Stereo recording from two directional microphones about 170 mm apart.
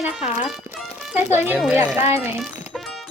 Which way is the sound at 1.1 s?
10° right (ahead or behind).